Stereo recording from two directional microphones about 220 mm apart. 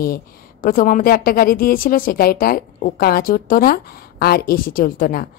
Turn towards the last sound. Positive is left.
turn(degrees=40)  # may be behind; listen again after turning